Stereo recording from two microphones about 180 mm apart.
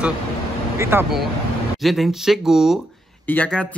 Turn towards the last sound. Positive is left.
turn(degrees=5)  # may be behind; listen again after turning